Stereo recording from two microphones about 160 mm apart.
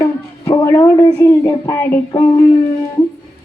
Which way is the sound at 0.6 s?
20° left (ahead or behind).